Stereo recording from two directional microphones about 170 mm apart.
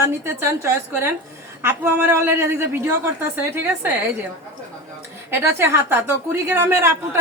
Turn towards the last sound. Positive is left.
turn(degrees=-15)  # may be behind; listen again after turning